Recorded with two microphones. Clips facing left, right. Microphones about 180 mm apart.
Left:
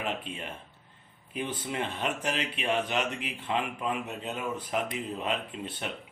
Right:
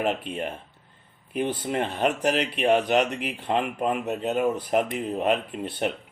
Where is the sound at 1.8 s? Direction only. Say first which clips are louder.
Right 8 dB; 60° right (ahead or behind).